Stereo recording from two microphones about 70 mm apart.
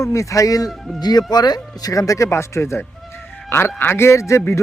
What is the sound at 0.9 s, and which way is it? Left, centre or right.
A man's voice, left.